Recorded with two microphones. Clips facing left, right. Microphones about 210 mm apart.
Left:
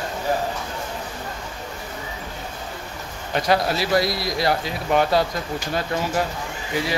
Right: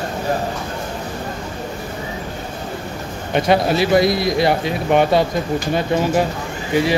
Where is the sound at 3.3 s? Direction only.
25° right (ahead or behind).